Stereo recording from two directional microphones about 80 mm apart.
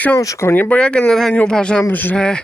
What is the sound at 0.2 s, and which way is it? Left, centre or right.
Speech, left.